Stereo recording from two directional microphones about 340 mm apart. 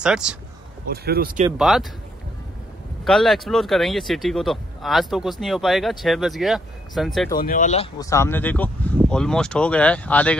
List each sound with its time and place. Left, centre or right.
0.0 s speech: centre
0.8 s speech: right
1.6 s speech: centre
3.1 s speech: centre
7.3 s speech: left; by 10.3 s centre